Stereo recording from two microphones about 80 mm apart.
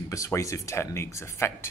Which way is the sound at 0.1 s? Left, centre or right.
Left.